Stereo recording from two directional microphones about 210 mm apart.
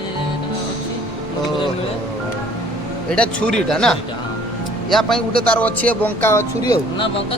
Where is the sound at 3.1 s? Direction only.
5° left (ahead or behind).